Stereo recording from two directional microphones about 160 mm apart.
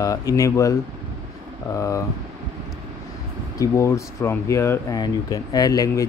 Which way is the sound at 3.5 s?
20° left (ahead or behind).